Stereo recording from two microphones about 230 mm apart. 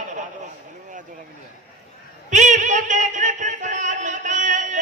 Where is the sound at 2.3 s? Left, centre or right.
Right.